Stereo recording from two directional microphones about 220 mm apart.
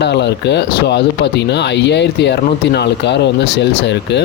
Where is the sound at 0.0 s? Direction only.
50° left (ahead or behind).